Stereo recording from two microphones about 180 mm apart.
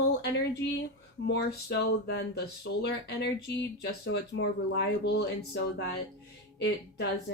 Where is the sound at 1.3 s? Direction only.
70° left (ahead or behind).